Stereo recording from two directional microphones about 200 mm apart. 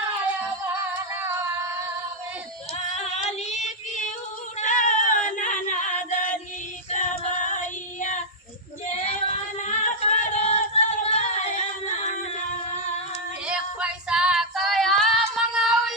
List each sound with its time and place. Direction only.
2.9 s yodeling: 35° left (ahead or behind)
4.6 s singing: 40° left (ahead or behind)
6.9 s female singing: 40° left (ahead or behind)
9.6 s singing: 35° left (ahead or behind)
13.5 s female singing: 5° right (ahead or behind)